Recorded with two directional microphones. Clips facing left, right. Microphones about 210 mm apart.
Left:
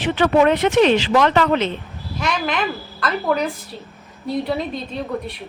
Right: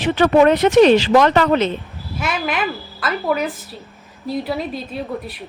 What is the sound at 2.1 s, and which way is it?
A woman's voice, 5° right (ahead or behind).